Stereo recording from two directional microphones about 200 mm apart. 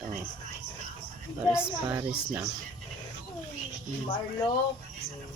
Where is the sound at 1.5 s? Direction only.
5° right (ahead or behind).